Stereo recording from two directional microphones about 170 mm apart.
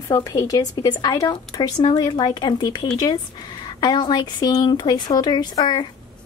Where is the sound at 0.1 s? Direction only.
15° left (ahead or behind).